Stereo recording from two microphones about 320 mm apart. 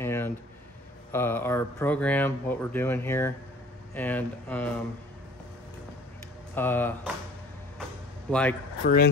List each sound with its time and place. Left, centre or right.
0.0 s a sound: centre
1.1 s speech: centre
6.5 s speech: centre
8.3 s speech: centre
8.8 s speech: left